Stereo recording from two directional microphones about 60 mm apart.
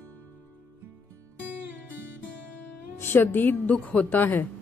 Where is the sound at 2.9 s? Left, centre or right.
Left.